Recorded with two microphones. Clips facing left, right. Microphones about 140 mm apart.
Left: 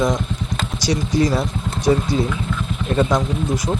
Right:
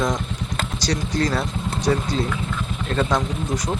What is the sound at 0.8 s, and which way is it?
Speech, 10° left (ahead or behind).